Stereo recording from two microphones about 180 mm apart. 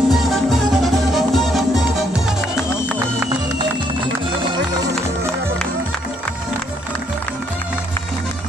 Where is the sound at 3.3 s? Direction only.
25° right (ahead or behind).